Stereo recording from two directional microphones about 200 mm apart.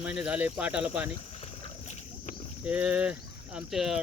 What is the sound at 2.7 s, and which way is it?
Speech, 5° right (ahead or behind).